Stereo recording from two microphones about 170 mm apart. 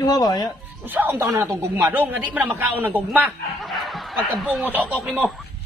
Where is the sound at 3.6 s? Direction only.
Centre (ahead or behind).